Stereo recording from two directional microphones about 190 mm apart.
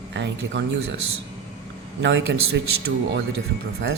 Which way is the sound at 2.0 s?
65° right (ahead or behind).